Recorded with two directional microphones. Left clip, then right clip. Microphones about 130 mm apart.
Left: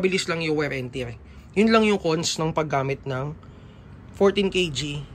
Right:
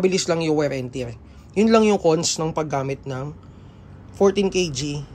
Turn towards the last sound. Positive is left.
turn(degrees=-25)  # may be behind; listen again after turning